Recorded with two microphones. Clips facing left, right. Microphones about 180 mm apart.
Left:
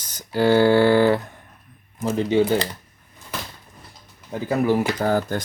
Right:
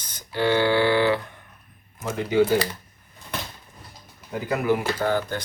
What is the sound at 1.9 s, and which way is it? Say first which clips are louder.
Speech: left 5 dB; 30° left (ahead or behind).